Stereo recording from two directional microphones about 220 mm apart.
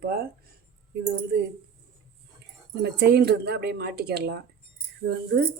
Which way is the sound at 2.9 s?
45° right (ahead or behind).